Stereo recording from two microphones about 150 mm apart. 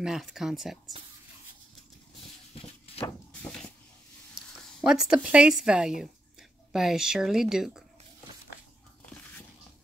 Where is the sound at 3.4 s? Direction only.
5° left (ahead or behind).